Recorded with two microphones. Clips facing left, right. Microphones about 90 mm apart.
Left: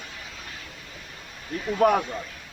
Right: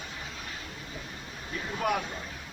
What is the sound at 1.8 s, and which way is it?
Speech, 45° left (ahead or behind).